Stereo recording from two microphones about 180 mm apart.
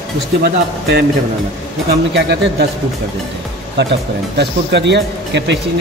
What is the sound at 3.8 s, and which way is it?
Speech, 75° right (ahead or behind).